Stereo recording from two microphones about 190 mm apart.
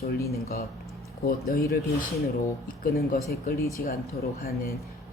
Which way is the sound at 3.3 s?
55° left (ahead or behind).